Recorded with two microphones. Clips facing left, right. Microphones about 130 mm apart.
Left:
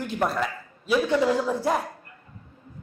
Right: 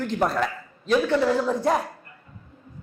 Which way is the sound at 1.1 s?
15° left (ahead or behind).